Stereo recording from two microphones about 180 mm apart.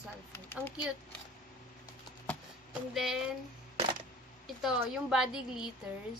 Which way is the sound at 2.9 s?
Centre (ahead or behind).